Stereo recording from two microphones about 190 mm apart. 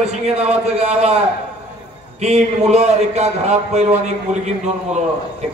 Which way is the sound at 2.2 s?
35° right (ahead or behind).